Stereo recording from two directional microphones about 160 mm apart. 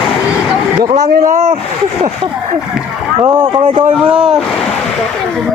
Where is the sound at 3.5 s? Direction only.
35° right (ahead or behind).